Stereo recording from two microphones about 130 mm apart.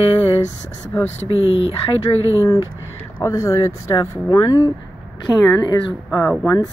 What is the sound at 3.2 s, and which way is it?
Speech, 25° left (ahead or behind).